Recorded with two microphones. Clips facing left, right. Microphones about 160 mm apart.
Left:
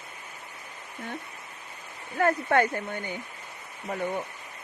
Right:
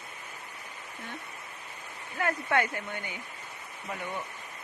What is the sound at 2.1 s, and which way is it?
Speech, 45° left (ahead or behind).